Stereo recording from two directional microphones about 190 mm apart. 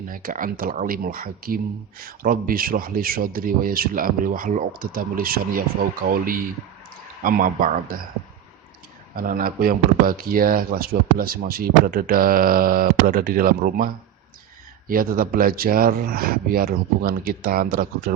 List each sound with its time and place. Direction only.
0.1 s speech: 45° right (ahead or behind)
9.1 s speech: 50° right (ahead or behind)